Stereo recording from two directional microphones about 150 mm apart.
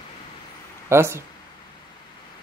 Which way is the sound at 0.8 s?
15° right (ahead or behind).